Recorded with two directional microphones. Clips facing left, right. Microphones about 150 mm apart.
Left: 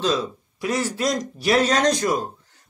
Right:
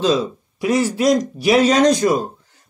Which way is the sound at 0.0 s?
10° right (ahead or behind).